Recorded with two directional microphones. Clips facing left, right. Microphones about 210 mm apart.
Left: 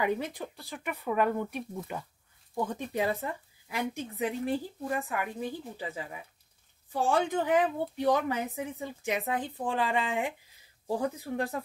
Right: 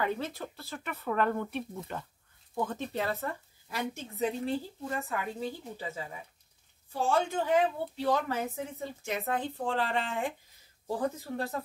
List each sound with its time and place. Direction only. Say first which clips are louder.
0.0 s speech: left 2 dB; 15° left (ahead or behind)